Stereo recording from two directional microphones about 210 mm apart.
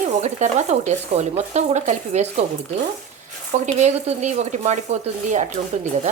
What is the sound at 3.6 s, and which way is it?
Speech, 35° right (ahead or behind).